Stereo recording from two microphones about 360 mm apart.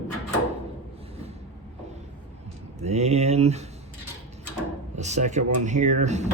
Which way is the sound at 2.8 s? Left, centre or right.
Centre.